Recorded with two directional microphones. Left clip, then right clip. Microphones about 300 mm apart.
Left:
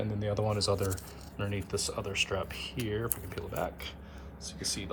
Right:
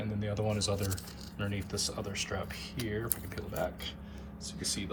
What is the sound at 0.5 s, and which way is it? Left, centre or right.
Speech, left.